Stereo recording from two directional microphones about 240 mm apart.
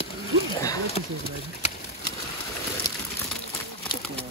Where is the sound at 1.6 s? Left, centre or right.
Left.